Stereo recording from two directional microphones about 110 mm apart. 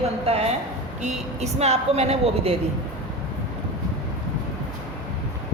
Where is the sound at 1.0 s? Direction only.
85° right.